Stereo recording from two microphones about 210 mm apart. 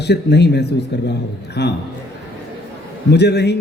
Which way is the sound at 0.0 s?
55° left (ahead or behind).